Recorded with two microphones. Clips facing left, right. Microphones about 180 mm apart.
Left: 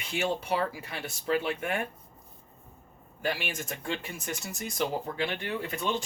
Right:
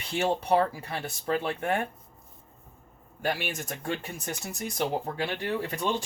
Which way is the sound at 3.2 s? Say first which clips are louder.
Right 2 dB; 45° right (ahead or behind).